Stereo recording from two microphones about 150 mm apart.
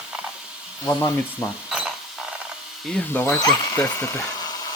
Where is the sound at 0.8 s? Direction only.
15° left (ahead or behind).